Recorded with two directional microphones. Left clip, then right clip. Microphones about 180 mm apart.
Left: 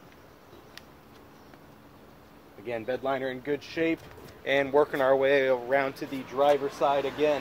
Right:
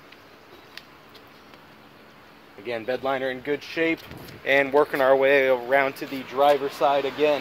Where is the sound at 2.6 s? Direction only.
50° right (ahead or behind).